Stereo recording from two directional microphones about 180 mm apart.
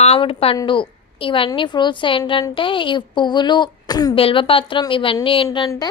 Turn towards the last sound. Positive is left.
turn(degrees=25)  # may be behind; listen again after turning